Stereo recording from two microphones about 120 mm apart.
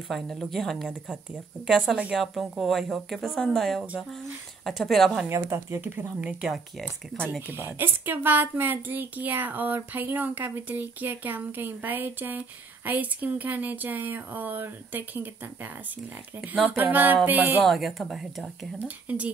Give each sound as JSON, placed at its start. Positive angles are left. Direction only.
{"t": 0.1, "sound": "speech", "side_deg": 0}
{"t": 5.3, "sound": "a woman's voice", "side_deg": -25}
{"t": 16.3, "sound": "speech", "side_deg": 0}
{"t": 16.7, "sound": "a woman's voice", "side_deg": -15}
{"t": 17.6, "sound": "speech", "side_deg": 0}
{"t": 19.0, "sound": "a woman's voice", "side_deg": -10}